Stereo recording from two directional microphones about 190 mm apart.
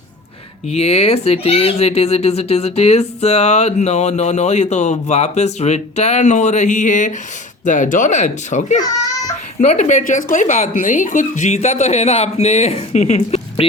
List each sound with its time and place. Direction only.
0.7 s speech: 35° left (ahead or behind)